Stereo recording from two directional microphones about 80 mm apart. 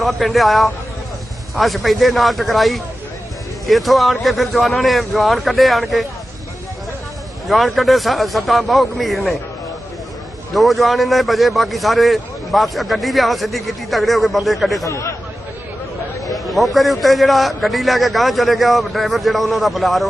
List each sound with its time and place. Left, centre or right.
0.0 s a man's voice: centre
7.4 s a man's voice: centre
10.5 s a man's voice: centre
14.8 s speech: left
16.3 s a man's voice: centre